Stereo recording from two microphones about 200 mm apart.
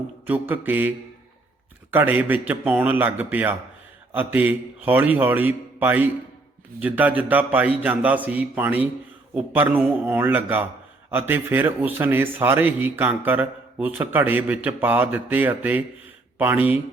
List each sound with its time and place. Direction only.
0.3 s speech: 10° right (ahead or behind)